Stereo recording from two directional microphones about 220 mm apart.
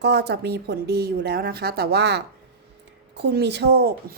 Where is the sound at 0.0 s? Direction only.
50° right (ahead or behind).